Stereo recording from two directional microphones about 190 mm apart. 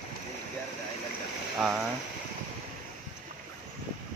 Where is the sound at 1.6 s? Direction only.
5° right (ahead or behind).